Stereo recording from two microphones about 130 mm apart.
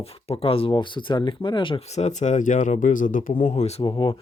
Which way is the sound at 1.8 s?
60° left (ahead or behind).